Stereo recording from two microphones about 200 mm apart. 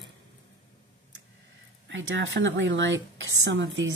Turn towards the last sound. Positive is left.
turn(degrees=-70)  # may be behind; listen again after turning